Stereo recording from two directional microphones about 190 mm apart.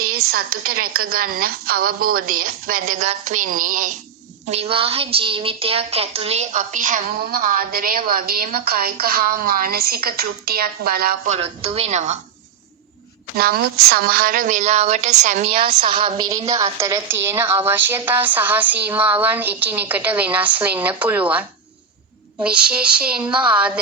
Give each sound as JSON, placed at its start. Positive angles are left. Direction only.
{"t": 0.3, "sound": "a woman's voice", "side_deg": -50}
{"t": 3.0, "sound": "a woman's voice", "side_deg": -35}
{"t": 4.4, "sound": "a woman's voice", "side_deg": -35}
{"t": 11.3, "sound": "a woman's voice", "side_deg": -30}
{"t": 13.3, "sound": "a woman's voice", "side_deg": -55}